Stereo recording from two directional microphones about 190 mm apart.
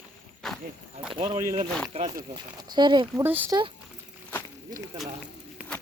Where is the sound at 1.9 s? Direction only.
35° right (ahead or behind).